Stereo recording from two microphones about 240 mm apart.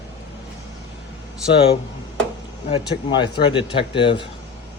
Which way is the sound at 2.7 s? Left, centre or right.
Centre.